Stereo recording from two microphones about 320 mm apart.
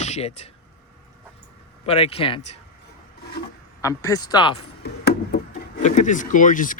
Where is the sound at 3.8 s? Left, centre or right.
Centre.